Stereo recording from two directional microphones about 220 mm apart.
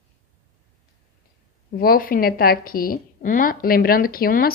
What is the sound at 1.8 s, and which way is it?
A woman's voice, 40° left (ahead or behind).